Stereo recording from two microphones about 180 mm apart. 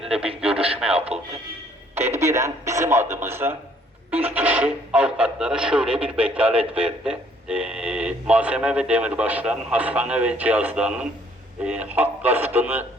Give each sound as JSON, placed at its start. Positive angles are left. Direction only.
{"t": 0.3, "sound": "radio", "side_deg": -30}
{"t": 0.9, "sound": "music", "side_deg": -35}
{"t": 2.0, "sound": "radio", "side_deg": -15}
{"t": 4.1, "sound": "speech", "side_deg": -10}